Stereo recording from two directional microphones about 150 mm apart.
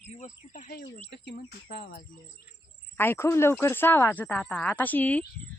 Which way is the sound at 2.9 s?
15° left (ahead or behind).